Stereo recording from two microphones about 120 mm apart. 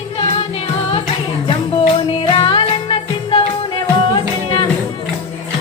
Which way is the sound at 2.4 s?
45° left (ahead or behind).